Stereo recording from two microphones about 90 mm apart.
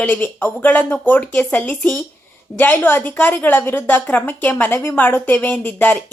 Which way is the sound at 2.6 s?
20° left (ahead or behind).